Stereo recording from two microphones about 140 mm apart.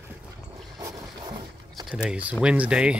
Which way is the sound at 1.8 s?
5° right (ahead or behind).